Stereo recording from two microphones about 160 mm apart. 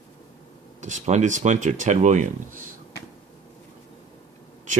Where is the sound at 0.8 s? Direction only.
45° right (ahead or behind).